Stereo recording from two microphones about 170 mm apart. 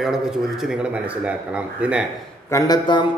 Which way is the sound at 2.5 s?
20° left (ahead or behind).